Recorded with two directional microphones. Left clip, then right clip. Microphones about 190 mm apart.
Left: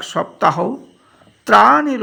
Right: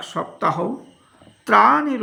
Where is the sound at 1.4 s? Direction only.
35° left (ahead or behind).